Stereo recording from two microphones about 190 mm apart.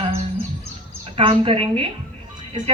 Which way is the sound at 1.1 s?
30° right (ahead or behind).